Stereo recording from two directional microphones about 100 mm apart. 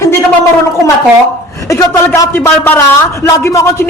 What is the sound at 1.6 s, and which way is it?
A man's voice, 30° left (ahead or behind).